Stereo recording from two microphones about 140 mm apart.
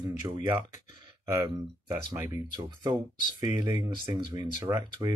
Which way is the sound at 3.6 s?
15° right (ahead or behind).